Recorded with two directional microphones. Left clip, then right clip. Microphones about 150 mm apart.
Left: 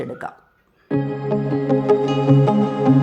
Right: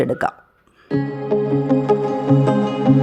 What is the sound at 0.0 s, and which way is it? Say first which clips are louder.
Speech: right 10 dB; 45° right (ahead or behind).